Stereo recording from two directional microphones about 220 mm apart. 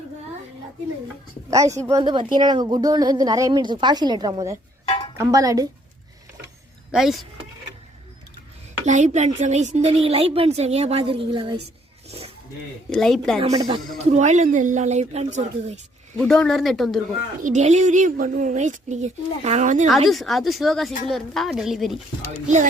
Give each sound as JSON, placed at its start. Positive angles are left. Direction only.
{"t": 1.5, "sound": "speech", "side_deg": -15}
{"t": 6.9, "sound": "speech", "side_deg": 0}
{"t": 8.9, "sound": "speech", "side_deg": -30}
{"t": 12.0, "sound": "a sound", "side_deg": -25}
{"t": 12.9, "sound": "speech", "side_deg": 0}
{"t": 13.4, "sound": "a woman's voice", "side_deg": -25}
{"t": 16.1, "sound": "speech", "side_deg": 5}
{"t": 17.4, "sound": "a woman's voice", "side_deg": -30}
{"t": 20.1, "sound": "speech", "side_deg": 0}